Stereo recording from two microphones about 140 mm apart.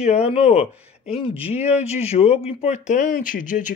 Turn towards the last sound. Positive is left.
turn(degrees=65)  # may be behind; listen again after turning